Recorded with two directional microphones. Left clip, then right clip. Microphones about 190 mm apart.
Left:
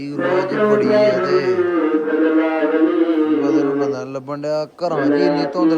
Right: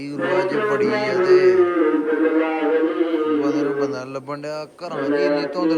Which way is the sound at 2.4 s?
55° left (ahead or behind).